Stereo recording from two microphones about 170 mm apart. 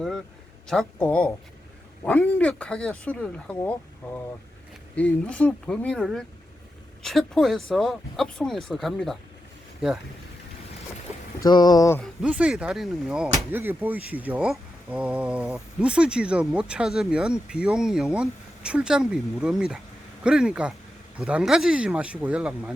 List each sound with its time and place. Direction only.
0.7 s speech: 5° left (ahead or behind)
11.3 s speech: 25° left (ahead or behind)
12.2 s speech: 5° right (ahead or behind)
13.5 s speech: 10° right (ahead or behind)